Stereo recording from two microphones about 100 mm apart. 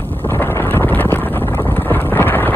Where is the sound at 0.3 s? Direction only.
20° left (ahead or behind).